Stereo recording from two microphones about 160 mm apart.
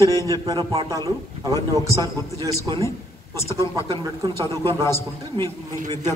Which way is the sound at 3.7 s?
20° left (ahead or behind).